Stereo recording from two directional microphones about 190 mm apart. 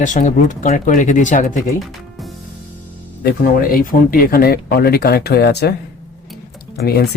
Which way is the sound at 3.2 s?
50° left (ahead or behind).